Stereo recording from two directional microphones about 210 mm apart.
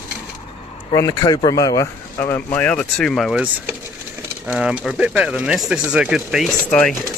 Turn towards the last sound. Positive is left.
turn(degrees=5)  # may be behind; listen again after turning